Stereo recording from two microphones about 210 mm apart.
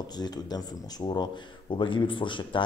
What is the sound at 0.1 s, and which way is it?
Speech, 20° left (ahead or behind).